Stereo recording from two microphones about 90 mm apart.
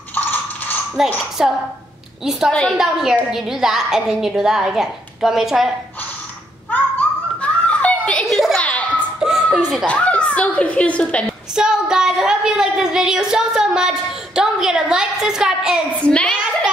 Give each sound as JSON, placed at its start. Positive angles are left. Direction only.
{"t": 0.1, "sound": "mechanisms", "side_deg": 20}
{"t": 0.9, "sound": "a woman's voice", "side_deg": -5}
{"t": 2.8, "sound": "a woman's voice", "side_deg": -5}
{"t": 6.7, "sound": "children playing", "side_deg": 15}
{"t": 8.3, "sound": "children playing", "side_deg": -5}
{"t": 8.5, "sound": "children playing", "side_deg": 15}
{"t": 9.2, "sound": "a sound", "side_deg": -5}
{"t": 9.8, "sound": "a woman's voice", "side_deg": 15}
{"t": 11.5, "sound": "a woman's voice", "side_deg": -10}
{"t": 16.1, "sound": "a woman's voice", "side_deg": 15}